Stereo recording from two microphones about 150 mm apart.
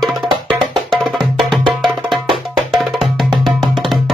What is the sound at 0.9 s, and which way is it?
Music, centre (ahead or behind).